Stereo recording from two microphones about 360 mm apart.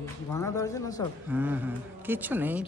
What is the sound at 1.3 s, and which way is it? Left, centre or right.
Speech, centre.